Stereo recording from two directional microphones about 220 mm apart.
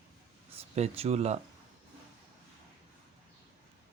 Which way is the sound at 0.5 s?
30° right (ahead or behind).